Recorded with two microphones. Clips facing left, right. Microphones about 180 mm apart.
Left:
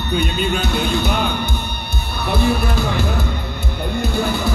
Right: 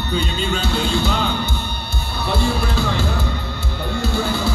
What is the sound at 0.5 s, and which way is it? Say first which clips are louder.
Music: right 2 dB; 15° left (ahead or behind).